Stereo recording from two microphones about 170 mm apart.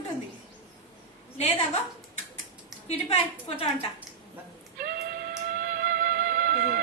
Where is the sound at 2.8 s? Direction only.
35° left (ahead or behind).